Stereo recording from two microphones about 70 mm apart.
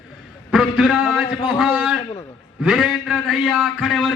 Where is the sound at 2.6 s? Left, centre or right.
Centre.